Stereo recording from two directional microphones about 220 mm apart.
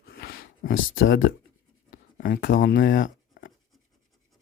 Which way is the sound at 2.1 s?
40° left (ahead or behind).